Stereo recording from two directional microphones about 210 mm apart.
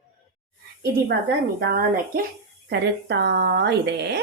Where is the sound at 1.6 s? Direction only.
45° right (ahead or behind).